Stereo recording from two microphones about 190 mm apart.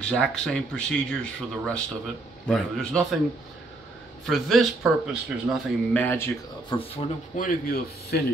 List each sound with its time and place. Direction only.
0.0 s speech: 5° left (ahead or behind)
4.3 s speech: centre (ahead or behind)
6.0 s speech: 10° left (ahead or behind)
6.7 s speech: 30° left (ahead or behind)
7.3 s speech: 50° left (ahead or behind)